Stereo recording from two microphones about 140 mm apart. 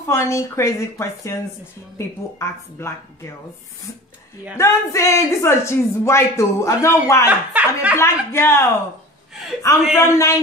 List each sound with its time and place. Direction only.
0.1 s a man's voice: 20° left (ahead or behind)
4.6 s a man's voice: 20° left (ahead or behind)
7.2 s speech: 10° right (ahead or behind)
7.9 s speech: 15° left (ahead or behind)
9.9 s a man's voice: 20° left (ahead or behind)